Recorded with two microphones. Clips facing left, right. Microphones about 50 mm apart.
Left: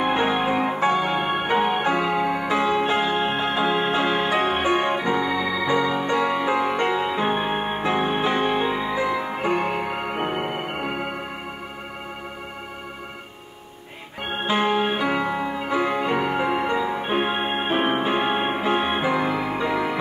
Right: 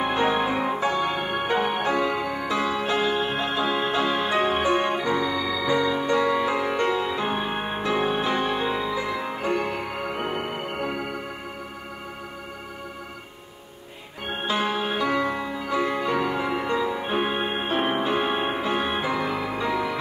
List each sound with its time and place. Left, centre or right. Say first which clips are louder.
0.0 s music: left 1 dB; left
14.5 s music: left 4 dB; left